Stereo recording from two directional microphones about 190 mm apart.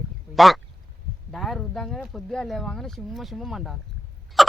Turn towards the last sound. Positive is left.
turn(degrees=0)  # may be behind; listen again after turning